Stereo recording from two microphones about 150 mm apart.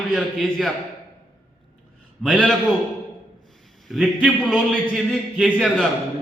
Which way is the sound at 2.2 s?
5° left (ahead or behind).